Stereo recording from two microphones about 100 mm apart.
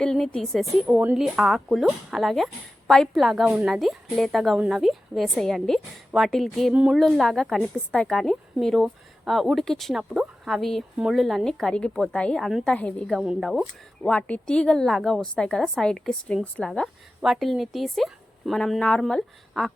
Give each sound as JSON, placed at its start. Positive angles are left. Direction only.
{"t": 0.0, "sound": "a woman's voice", "side_deg": 10}
{"t": 0.9, "sound": "a woman's voice", "side_deg": -15}
{"t": 1.1, "sound": "a woman's voice", "side_deg": 0}
{"t": 3.4, "sound": "a woman's voice", "side_deg": -15}
{"t": 3.7, "sound": "a woman's voice", "side_deg": 0}
{"t": 6.7, "sound": "a woman's voice", "side_deg": -10}
{"t": 7.0, "sound": "a woman's voice", "side_deg": 0}
{"t": 13.4, "sound": "a woman's voice", "side_deg": 0}
{"t": 14.0, "sound": "a woman's voice", "side_deg": 10}